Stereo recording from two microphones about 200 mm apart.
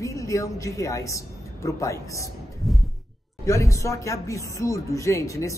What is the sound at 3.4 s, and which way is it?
Speech, 15° left (ahead or behind).